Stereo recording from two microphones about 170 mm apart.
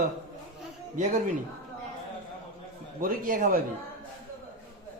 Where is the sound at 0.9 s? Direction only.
45° right (ahead or behind).